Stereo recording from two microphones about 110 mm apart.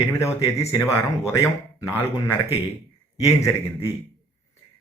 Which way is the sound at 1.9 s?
25° left (ahead or behind).